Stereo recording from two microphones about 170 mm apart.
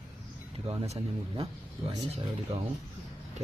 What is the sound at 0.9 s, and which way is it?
Speech, 35° right (ahead or behind).